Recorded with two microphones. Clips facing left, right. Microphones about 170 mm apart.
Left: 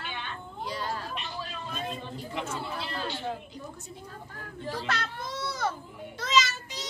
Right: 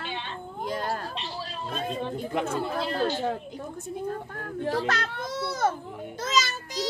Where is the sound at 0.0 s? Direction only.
30° right (ahead or behind).